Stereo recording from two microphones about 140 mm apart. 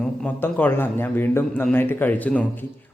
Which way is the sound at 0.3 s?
15° left (ahead or behind).